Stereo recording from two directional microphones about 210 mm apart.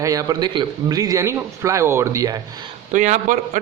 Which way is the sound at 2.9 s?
35° right (ahead or behind).